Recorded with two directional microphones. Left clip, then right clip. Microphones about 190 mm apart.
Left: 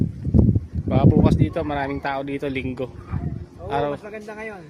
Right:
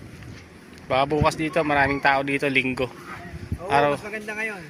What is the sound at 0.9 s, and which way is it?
Speech, 5° right (ahead or behind).